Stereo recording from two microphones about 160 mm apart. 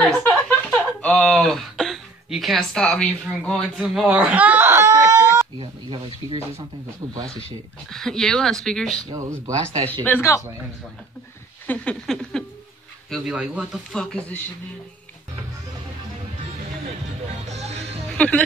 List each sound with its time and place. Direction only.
0.2 s speech: 5° left (ahead or behind); by 5.2 s 20° right (ahead or behind)
5.6 s speech: 30° right (ahead or behind)
7.9 s speech: 5° left (ahead or behind)
9.1 s speech: 20° right (ahead or behind)
10.0 s speech: 15° left (ahead or behind)
11.6 s a sound: 10° left (ahead or behind)
13.1 s speech: 5° right (ahead or behind)
13.9 s speech: 5° left (ahead or behind)
16.8 s music: 45° right (ahead or behind)
18.1 s music: 10° left (ahead or behind)